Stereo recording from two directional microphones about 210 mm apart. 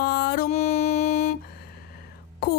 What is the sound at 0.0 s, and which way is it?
Music, 45° left (ahead or behind).